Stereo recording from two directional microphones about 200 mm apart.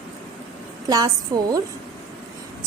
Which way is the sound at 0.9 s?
20° right (ahead or behind).